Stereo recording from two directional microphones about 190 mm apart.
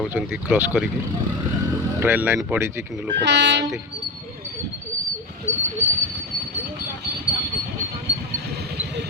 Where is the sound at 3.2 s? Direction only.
65° right (ahead or behind).